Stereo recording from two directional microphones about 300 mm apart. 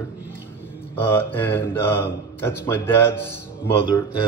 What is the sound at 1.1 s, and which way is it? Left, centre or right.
Mantra, centre.